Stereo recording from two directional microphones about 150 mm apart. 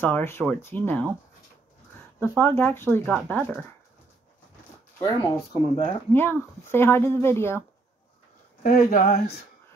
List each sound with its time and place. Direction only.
0.0 s speech: 15° left (ahead or behind)
2.1 s speech: 10° left (ahead or behind)
5.0 s speech: 30° left (ahead or behind)
6.1 s speech: 15° left (ahead or behind)
8.6 s speech: 75° left (ahead or behind)